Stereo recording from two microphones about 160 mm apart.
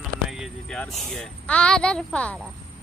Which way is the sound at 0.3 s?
Centre (ahead or behind).